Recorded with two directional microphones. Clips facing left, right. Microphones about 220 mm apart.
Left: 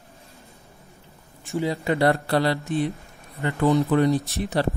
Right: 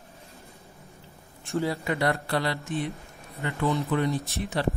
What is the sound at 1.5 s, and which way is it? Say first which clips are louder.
Speech: left 2 dB; 15° left (ahead or behind).